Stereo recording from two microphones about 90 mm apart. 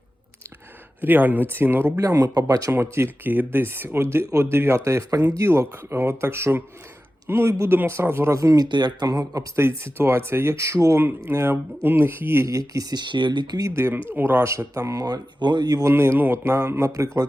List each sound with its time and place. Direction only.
1.0 s speech: 20° right (ahead or behind)
2.0 s speech: 40° right (ahead or behind)
2.7 s speech: 30° right (ahead or behind)
8.7 s speech: 50° right (ahead or behind)
9.6 s speech: 25° right (ahead or behind); by 13.7 s 45° right (ahead or behind)
13.7 s speech: 25° right (ahead or behind); by 15.8 s 50° right (ahead or behind)
15.8 s speech: 30° right (ahead or behind)